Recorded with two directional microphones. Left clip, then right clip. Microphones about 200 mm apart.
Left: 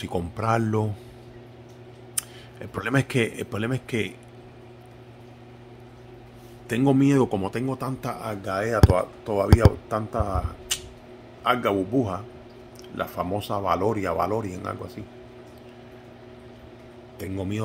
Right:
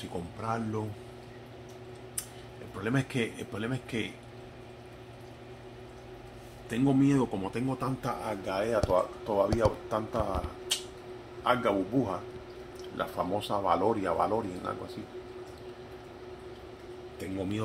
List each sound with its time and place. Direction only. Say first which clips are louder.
0.1 s speech: left 10 dB; 60° left (ahead or behind)
2.8 s a man's voice: left 7 dB; 50° left (ahead or behind)
6.7 s a man's voice: left 6 dB; 50° left (ahead or behind)
7.7 s speech: left 3 dB; 30° left (ahead or behind)
11.4 s speech: left 5 dB; 40° left (ahead or behind)